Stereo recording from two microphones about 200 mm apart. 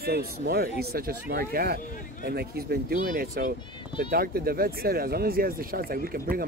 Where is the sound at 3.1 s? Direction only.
40° right (ahead or behind).